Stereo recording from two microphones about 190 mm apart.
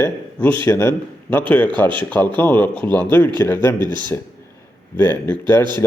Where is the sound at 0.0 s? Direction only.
10° left (ahead or behind).